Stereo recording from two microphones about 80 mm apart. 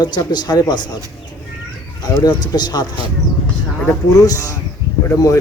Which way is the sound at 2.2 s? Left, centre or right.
Left.